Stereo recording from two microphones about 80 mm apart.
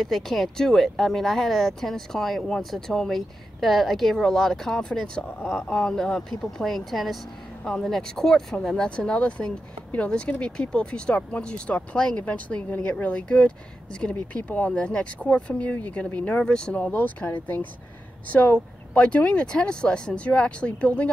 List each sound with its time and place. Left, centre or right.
0.0 s speech: centre
5.4 s speech: centre
5.7 s speech: centre
16.9 s speech: left